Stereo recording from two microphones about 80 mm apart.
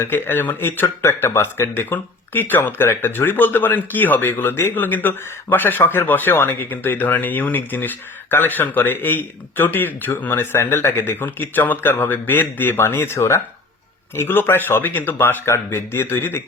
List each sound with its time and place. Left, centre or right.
0.0 s a man's voice: left